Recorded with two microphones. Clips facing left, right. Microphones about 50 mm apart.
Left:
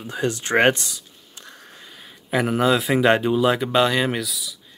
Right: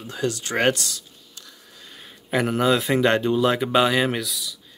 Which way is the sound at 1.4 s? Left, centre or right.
Left.